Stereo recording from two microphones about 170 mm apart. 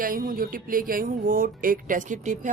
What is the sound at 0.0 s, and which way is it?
Speech, 55° right (ahead or behind).